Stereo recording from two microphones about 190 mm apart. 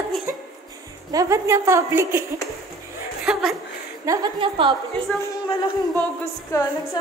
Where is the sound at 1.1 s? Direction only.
15° right (ahead or behind).